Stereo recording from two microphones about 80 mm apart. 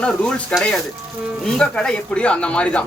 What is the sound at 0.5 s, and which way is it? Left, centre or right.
Speech, centre.